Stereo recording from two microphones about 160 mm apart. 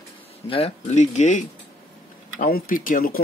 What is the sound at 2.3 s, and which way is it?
Speech, 65° left (ahead or behind).